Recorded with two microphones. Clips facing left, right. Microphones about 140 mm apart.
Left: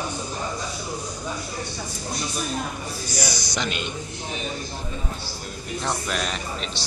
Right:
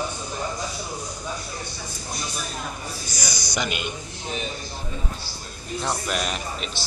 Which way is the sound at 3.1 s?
30° left (ahead or behind).